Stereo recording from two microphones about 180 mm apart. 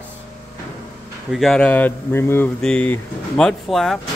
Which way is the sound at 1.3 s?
Centre (ahead or behind).